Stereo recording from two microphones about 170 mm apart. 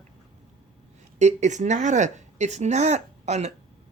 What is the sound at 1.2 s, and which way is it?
A woman's voice, 45° right (ahead or behind).